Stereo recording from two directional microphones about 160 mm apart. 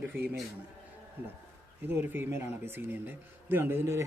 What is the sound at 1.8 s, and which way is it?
Speech, 15° right (ahead or behind).